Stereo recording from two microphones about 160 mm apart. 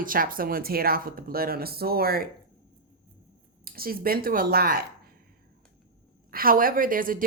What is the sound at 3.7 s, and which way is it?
Speech, 65° right (ahead or behind).